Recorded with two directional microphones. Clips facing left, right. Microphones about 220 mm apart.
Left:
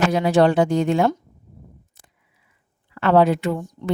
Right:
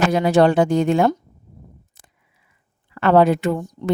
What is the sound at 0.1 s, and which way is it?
Speech, 45° right (ahead or behind).